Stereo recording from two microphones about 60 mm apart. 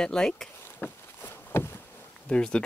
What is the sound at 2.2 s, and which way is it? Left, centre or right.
Speech, centre.